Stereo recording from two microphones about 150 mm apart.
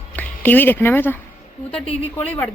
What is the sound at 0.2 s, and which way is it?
Speech, 10° left (ahead or behind).